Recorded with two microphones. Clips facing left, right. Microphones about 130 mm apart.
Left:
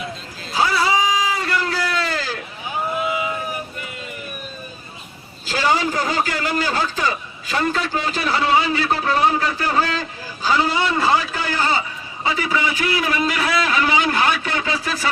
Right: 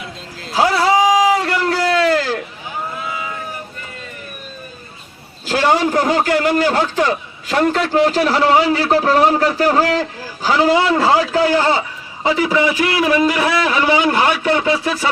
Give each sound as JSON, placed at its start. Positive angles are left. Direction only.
{"t": 0.4, "sound": "a sound", "side_deg": -75}
{"t": 2.9, "sound": "boat", "side_deg": 20}
{"t": 5.5, "sound": "a man's voice", "side_deg": -65}
{"t": 13.0, "sound": "a man's voice", "side_deg": -25}